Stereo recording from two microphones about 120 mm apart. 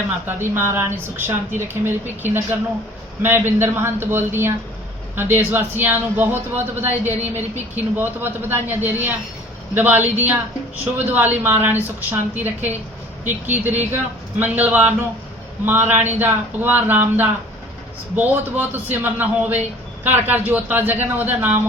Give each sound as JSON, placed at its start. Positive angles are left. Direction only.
{"t": 0.3, "sound": "a man's voice", "side_deg": -20}